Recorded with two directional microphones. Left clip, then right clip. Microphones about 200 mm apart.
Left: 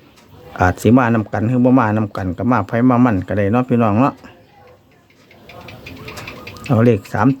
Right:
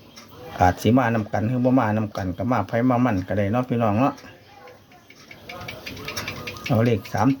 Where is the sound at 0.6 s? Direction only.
50° left (ahead or behind).